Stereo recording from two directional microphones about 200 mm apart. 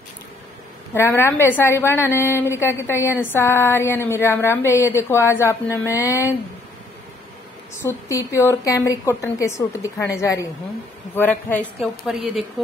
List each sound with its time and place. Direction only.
0.9 s a woman's voice: 10° left (ahead or behind)
7.8 s a woman's voice: 15° left (ahead or behind)
12.1 s speech: centre (ahead or behind)